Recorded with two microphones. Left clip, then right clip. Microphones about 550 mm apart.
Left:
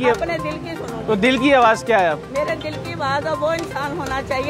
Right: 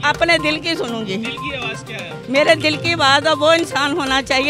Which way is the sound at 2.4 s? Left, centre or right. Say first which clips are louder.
Right 9 dB; right.